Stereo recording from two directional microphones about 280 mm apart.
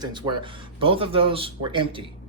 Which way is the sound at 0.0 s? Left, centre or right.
Centre.